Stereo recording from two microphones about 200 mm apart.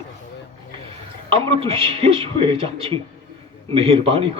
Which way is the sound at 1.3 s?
30° right (ahead or behind).